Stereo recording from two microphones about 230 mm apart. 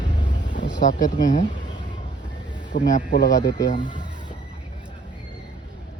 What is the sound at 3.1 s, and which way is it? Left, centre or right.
Speech, left.